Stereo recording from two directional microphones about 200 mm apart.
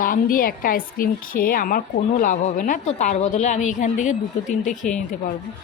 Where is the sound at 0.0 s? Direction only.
45° left (ahead or behind).